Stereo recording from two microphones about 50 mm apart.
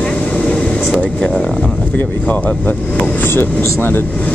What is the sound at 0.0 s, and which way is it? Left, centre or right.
Vehicle, left.